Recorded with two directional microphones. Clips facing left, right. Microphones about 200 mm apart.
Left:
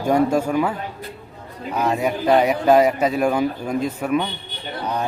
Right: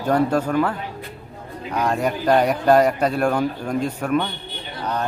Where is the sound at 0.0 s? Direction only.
10° left (ahead or behind).